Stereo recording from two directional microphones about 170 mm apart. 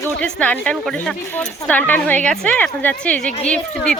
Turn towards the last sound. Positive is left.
turn(degrees=5)  # may be behind; listen again after turning